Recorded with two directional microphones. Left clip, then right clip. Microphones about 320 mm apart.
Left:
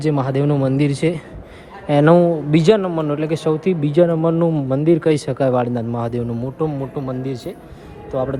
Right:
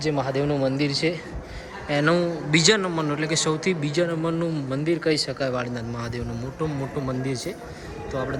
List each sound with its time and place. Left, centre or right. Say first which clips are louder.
0.0 s a man's voice: left 5 dB; centre